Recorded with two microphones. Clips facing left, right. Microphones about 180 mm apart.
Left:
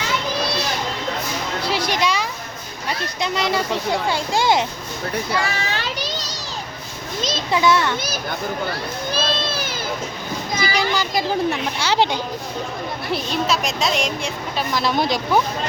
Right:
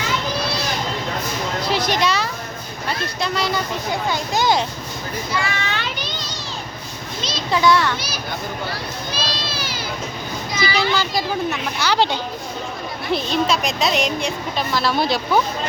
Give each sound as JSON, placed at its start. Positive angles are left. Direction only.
{"t": 1.6, "sound": "music", "side_deg": 10}
{"t": 3.2, "sound": "speech", "side_deg": 20}
{"t": 5.4, "sound": "children playing", "side_deg": 35}
{"t": 7.5, "sound": "speech", "side_deg": 20}
{"t": 9.1, "sound": "a sound", "side_deg": 50}
{"t": 10.6, "sound": "a child's voice", "side_deg": 45}
{"t": 10.9, "sound": "speech", "side_deg": 20}
{"t": 13.1, "sound": "speech", "side_deg": 0}
{"t": 14.7, "sound": "speech", "side_deg": 20}